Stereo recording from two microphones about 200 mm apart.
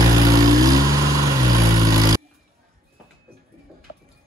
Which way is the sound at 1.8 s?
20° right (ahead or behind).